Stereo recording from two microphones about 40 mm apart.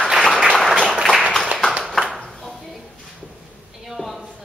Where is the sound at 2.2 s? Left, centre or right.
Centre.